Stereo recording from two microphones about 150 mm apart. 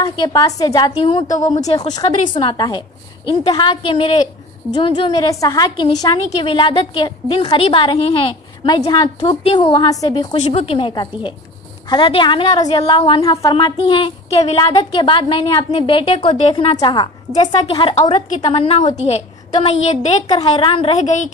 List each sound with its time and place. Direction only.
0.2 s a woman's voice: 25° left (ahead or behind); by 8.3 s 40° left (ahead or behind)
8.6 s a woman's voice: 25° left (ahead or behind); by 14.6 s 45° left (ahead or behind)
14.8 s a woman's voice: 35° left (ahead or behind)
20.3 s a woman's voice: 35° left (ahead or behind)
21.0 s a woman's voice: 50° left (ahead or behind)